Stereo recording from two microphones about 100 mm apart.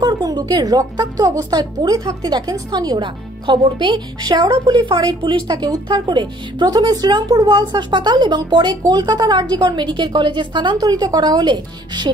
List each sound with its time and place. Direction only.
0.0 s speech: 45° right (ahead or behind)